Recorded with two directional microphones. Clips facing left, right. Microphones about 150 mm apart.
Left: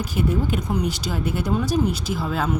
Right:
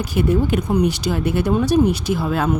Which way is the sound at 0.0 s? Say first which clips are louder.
Right 5 dB; 75° right (ahead or behind).